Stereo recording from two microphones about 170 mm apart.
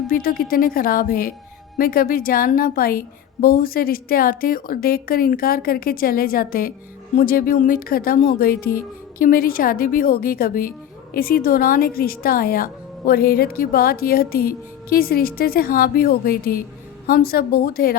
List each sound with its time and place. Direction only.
0.1 s speech: 60° left (ahead or behind)